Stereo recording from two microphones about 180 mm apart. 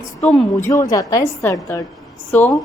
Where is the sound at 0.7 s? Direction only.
20° left (ahead or behind).